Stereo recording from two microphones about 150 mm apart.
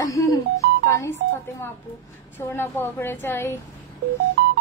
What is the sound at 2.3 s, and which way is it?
Speech, 15° left (ahead or behind).